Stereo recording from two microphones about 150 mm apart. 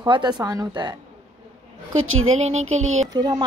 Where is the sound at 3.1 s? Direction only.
25° right (ahead or behind).